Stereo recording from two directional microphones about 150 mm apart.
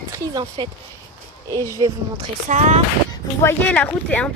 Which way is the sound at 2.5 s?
50° right (ahead or behind).